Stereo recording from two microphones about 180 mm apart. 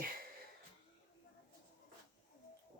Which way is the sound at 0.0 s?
55° right (ahead or behind).